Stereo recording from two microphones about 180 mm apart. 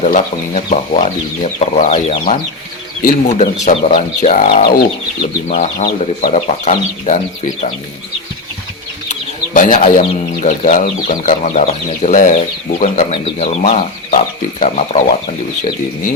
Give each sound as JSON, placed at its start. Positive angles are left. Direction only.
{"t": 0.0, "sound": "speech", "side_deg": 40}
{"t": 9.5, "sound": "speech", "side_deg": 45}